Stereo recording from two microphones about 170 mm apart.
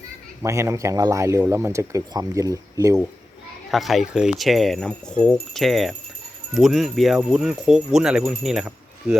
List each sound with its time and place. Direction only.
0.4 s speech: 15° right (ahead or behind)
3.7 s speech: centre (ahead or behind)